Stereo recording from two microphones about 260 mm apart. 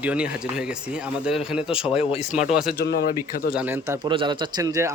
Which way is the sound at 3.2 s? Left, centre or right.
Centre.